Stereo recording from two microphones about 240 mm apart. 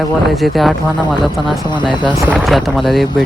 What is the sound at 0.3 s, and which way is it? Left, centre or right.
Speech, centre.